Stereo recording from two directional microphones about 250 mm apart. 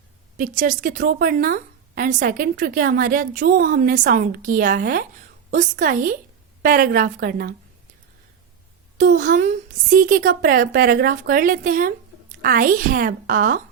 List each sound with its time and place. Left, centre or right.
0.3 s a woman's voice: right
9.0 s a woman's voice: right